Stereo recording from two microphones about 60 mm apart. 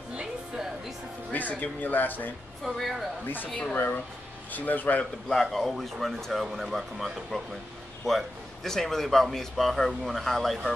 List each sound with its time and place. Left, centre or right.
0.1 s music: centre
1.3 s speech: left
2.6 s speech: centre
3.7 s speech: left
5.3 s speech: centre
8.6 s speech: centre